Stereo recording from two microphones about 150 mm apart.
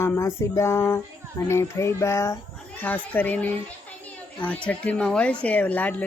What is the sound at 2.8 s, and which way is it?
Speech, 10° left (ahead or behind).